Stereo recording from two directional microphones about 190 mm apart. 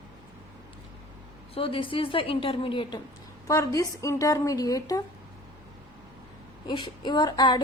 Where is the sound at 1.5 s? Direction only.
30° left (ahead or behind).